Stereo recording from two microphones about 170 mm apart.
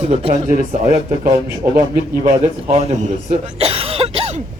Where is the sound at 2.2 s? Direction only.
40° right (ahead or behind).